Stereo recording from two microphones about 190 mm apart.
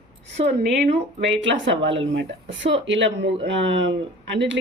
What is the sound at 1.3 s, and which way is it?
Speech, 75° right (ahead or behind).